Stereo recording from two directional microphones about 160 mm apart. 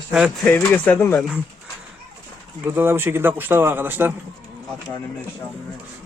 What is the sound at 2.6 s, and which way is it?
Speech, 15° right (ahead or behind).